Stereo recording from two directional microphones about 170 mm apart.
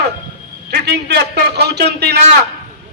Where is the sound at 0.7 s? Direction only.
75° right (ahead or behind).